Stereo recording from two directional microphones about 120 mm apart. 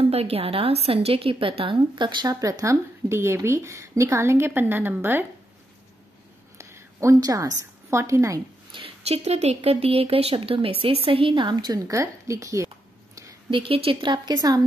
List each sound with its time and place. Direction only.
0.0 s speech: 55° right (ahead or behind); by 5.2 s 15° right (ahead or behind)
6.6 s a woman's voice: 25° right (ahead or behind)
8.7 s speech: 55° right (ahead or behind); by 12.6 s 25° right (ahead or behind)
13.5 s a woman's voice: 50° right (ahead or behind)